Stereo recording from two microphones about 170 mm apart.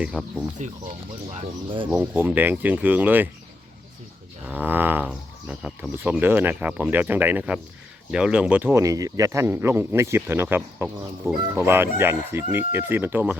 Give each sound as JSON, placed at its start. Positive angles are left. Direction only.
{"t": 0.0, "sound": "speech", "side_deg": 0}
{"t": 1.3, "sound": "speech", "side_deg": -35}
{"t": 1.9, "sound": "speech", "side_deg": -10}
{"t": 4.4, "sound": "speech", "side_deg": -10}